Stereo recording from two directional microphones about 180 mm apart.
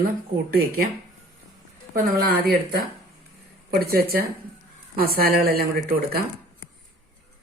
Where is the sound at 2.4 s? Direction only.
55° right (ahead or behind).